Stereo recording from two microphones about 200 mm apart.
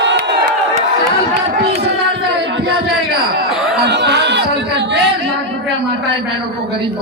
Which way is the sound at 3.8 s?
60° right (ahead or behind).